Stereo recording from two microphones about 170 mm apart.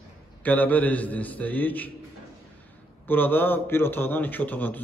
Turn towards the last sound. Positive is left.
turn(degrees=10)  # may be behind; listen again after turning